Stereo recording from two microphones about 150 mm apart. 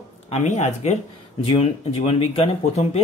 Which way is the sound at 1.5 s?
40° left (ahead or behind).